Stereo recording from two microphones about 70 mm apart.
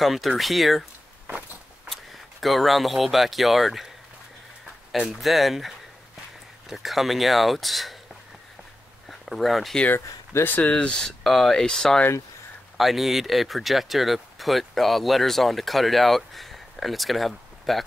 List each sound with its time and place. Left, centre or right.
0.0 s speech: centre
2.4 s speech: centre
5.2 s speech: centre
9.2 s speech: centre
9.8 s speech: left
10.7 s speech: centre
12.7 s speech: centre